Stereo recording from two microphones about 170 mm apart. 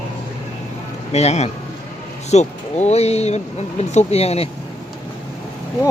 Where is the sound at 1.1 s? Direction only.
40° left (ahead or behind).